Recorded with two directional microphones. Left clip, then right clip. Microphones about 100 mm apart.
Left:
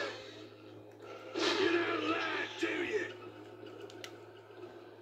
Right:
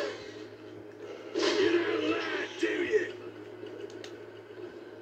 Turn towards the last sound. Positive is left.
turn(degrees=50)  # may be behind; listen again after turning